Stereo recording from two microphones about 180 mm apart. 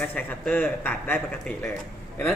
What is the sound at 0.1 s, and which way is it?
Speech, 10° left (ahead or behind).